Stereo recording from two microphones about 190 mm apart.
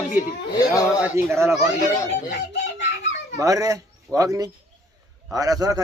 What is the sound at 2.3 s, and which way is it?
Chicken, 60° left (ahead or behind).